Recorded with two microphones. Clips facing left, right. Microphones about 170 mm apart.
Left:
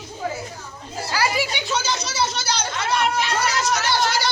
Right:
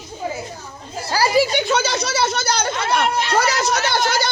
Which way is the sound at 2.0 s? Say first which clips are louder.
Right 4 dB; 55° right (ahead or behind).